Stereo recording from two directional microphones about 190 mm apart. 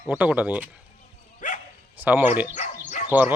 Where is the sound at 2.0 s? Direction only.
10° right (ahead or behind).